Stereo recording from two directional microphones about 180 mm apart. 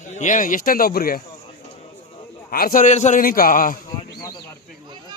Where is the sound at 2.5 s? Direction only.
50° left (ahead or behind).